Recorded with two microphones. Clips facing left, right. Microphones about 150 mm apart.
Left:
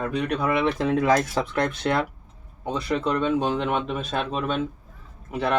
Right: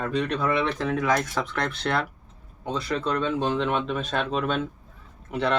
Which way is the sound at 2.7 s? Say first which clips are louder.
Left 2 dB; 20° left (ahead or behind).